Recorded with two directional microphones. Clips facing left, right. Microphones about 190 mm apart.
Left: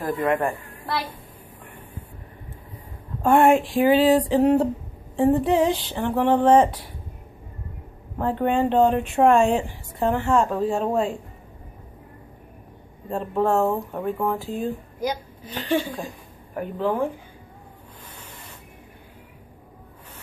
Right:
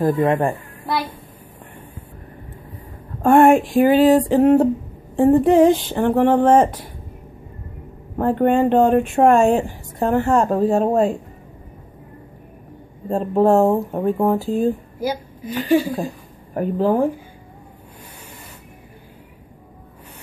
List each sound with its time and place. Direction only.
0.0 s a woman's voice: 25° right (ahead or behind)
3.2 s speech: 50° right (ahead or behind)
8.2 s speech: 50° right (ahead or behind)
13.1 s speech: 35° right (ahead or behind)
15.0 s a woman's voice: 10° right (ahead or behind)
16.5 s speech: 35° right (ahead or behind)